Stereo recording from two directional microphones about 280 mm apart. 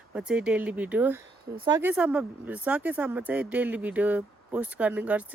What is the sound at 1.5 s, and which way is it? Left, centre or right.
Speech, centre.